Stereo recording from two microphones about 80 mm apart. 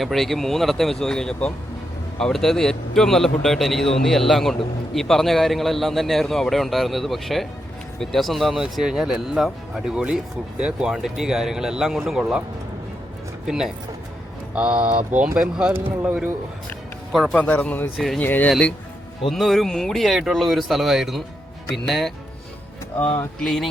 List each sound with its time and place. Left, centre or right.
0.0 s a man's voice: centre
13.5 s a man's voice: centre
15.7 s speech: right
17.1 s speech: centre
17.3 s speech: centre
17.9 s a man's voice: centre
18.2 s speech: left
19.3 s a man's voice: centre
23.4 s a man's voice: centre